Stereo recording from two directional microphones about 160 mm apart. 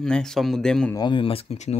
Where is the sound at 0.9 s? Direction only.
30° left (ahead or behind).